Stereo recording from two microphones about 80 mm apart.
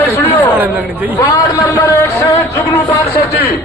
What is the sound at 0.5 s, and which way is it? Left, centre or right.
Chatter, right.